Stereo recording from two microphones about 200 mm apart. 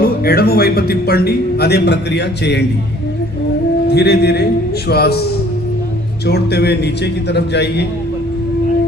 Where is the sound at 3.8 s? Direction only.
55° left (ahead or behind).